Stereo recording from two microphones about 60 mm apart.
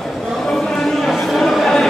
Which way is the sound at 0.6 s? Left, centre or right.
Centre.